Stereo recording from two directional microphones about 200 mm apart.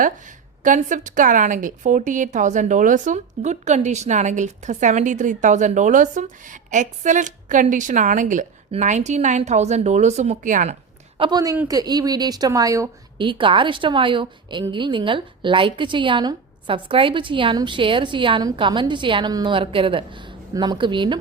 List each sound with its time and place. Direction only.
0.6 s a woman's voice: 40° right (ahead or behind)
11.2 s a woman's voice: 20° right (ahead or behind)
11.5 s speech: 10° right (ahead or behind)
11.8 s a woman's voice: 20° right (ahead or behind)